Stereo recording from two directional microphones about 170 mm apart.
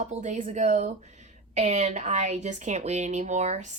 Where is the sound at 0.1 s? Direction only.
45° right (ahead or behind).